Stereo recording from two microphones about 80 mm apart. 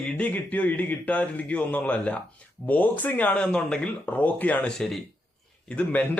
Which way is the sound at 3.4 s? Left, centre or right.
Centre.